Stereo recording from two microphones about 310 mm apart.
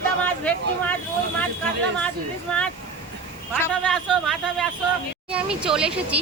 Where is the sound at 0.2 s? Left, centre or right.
Centre.